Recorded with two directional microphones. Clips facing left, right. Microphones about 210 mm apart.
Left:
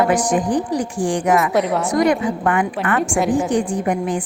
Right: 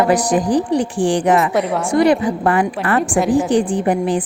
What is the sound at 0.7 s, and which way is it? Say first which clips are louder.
Speech: right 4 dB; 30° right (ahead or behind).